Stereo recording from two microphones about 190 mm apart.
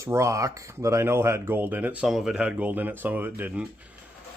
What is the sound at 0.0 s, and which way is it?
Speech, 15° right (ahead or behind).